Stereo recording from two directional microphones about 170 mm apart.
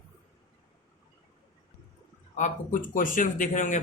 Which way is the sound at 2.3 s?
50° left (ahead or behind).